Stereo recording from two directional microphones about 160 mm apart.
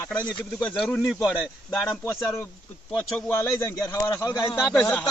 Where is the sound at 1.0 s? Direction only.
5° right (ahead or behind).